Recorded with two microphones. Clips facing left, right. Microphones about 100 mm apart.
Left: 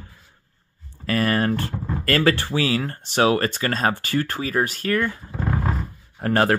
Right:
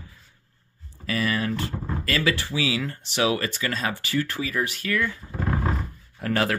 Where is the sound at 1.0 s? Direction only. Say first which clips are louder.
Left 5 dB; 50° left (ahead or behind).